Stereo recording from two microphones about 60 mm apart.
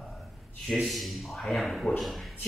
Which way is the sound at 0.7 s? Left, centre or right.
Centre.